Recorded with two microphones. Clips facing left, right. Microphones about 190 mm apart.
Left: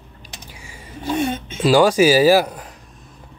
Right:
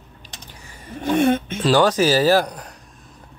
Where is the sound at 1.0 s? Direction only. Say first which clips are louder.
Right 4 dB; 55° right (ahead or behind).